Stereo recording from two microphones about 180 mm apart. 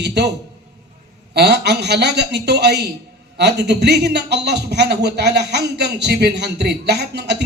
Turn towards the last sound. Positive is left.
turn(degrees=-70)  # may be behind; listen again after turning